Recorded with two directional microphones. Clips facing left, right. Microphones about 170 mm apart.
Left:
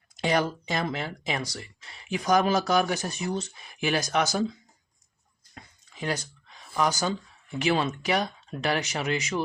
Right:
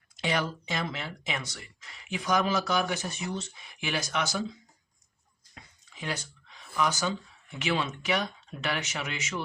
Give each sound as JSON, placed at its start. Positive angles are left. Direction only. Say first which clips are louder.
{"t": 0.2, "sound": "speech", "louder": "left 5 dB", "side_deg": 40}
{"t": 5.5, "sound": "a sound", "louder": "left 6 dB", "side_deg": 40}
{"t": 7.6, "sound": "speech", "louder": "left 5 dB", "side_deg": 40}